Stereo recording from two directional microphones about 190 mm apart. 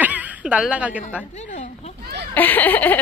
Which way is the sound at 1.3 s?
40° left (ahead or behind).